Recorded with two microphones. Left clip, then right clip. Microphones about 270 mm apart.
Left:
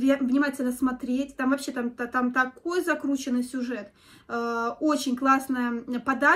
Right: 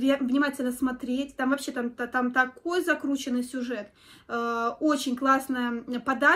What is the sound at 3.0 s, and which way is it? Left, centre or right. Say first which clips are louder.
Speech: left 1 dB; centre.